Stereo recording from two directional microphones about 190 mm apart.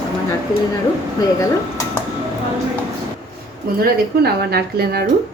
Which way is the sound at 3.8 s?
55° right (ahead or behind).